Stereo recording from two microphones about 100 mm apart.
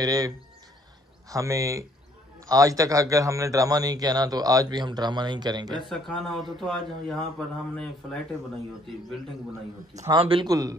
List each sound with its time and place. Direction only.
0.0 s a man's voice: 40° right (ahead or behind)
1.3 s a man's voice: 35° right (ahead or behind)
5.9 s speech: 5° left (ahead or behind)
10.1 s a man's voice: 65° right (ahead or behind)
10.4 s a man's voice: 35° right (ahead or behind)